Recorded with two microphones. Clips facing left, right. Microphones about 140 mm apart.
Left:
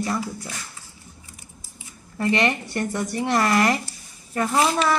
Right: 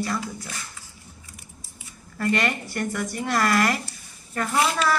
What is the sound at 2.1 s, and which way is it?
A woman's voice, 20° left (ahead or behind).